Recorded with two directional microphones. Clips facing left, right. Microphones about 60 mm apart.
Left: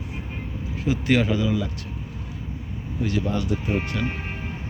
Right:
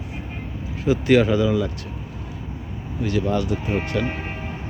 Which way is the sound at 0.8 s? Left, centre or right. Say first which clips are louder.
Right 5 dB; centre.